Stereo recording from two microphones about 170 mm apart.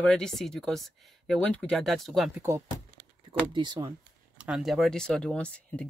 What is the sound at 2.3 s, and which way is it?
Speech, 15° right (ahead or behind).